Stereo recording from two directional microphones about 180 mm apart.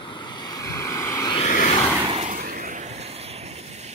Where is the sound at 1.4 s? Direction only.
40° left (ahead or behind).